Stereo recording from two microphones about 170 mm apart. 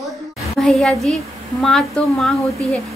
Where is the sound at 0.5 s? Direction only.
Centre (ahead or behind).